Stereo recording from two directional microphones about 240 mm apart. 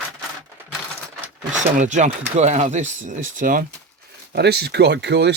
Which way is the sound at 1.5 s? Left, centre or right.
Right.